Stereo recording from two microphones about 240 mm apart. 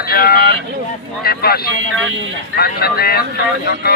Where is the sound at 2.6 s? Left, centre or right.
Left.